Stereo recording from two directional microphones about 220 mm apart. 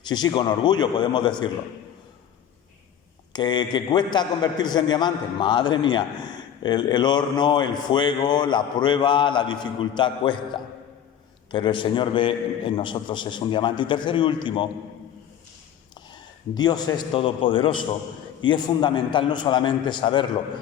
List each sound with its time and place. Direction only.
0.1 s speech: 20° left (ahead or behind)
3.3 s speech: 20° left (ahead or behind)
16.6 s speech: 20° left (ahead or behind)